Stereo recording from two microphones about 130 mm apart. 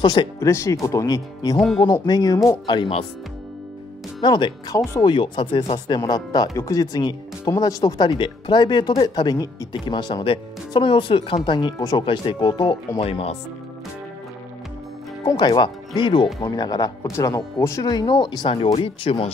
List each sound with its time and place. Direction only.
0.0 s speech: 35° left (ahead or behind)
0.4 s speech: 20° left (ahead or behind); by 3.0 s 40° left (ahead or behind)
4.2 s speech: 35° left (ahead or behind)
4.7 s speech: 25° left (ahead or behind)
5.1 s speech: 40° left (ahead or behind)
15.2 s speech: 35° left (ahead or behind)